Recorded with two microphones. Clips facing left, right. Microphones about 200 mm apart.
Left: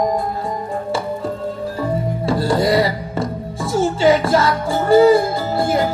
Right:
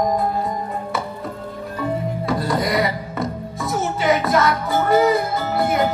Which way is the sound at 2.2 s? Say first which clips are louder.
Left 5 dB; 30° left (ahead or behind).